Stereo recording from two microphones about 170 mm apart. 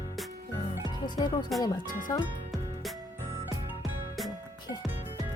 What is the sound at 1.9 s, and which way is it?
Speech, 50° left (ahead or behind).